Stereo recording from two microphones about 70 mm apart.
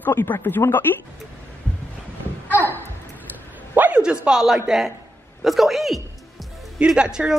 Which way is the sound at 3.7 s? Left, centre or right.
Right.